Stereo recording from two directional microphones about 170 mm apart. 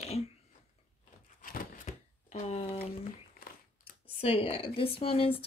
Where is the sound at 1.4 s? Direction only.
40° left (ahead or behind).